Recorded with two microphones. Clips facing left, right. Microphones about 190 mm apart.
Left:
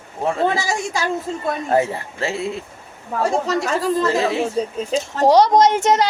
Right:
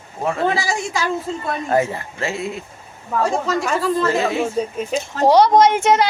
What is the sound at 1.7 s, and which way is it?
A woman's voice, 30° left (ahead or behind).